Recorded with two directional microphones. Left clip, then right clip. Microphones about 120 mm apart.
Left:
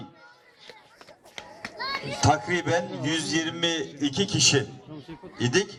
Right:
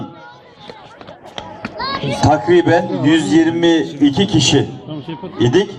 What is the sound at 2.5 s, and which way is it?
Speech, 40° left (ahead or behind).